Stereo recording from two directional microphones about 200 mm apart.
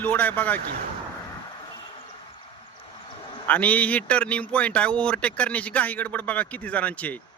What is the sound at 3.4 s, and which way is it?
Speech, 10° left (ahead or behind).